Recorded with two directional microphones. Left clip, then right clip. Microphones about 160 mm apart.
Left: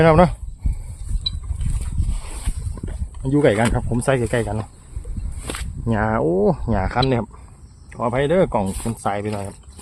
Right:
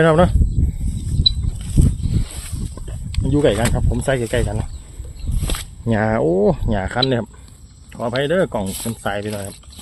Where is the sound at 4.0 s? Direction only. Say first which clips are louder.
Even; 10° left (ahead or behind).